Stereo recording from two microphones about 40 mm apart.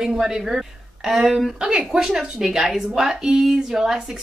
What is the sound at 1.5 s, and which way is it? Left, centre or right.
Speech, centre.